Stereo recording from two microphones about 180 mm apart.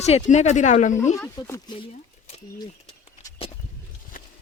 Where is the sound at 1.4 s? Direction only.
15° left (ahead or behind).